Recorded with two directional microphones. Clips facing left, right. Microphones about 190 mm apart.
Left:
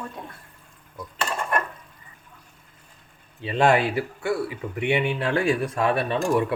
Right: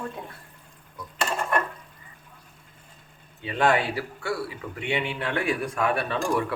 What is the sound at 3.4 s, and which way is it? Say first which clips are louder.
A man's voice: left 3 dB; 25° left (ahead or behind).